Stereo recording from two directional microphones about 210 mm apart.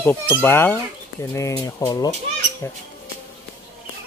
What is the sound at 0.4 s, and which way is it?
Speech, 10° left (ahead or behind).